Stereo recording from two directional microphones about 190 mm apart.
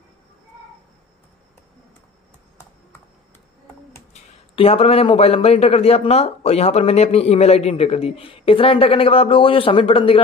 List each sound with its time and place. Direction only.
4.1 s a man's voice: 30° left (ahead or behind)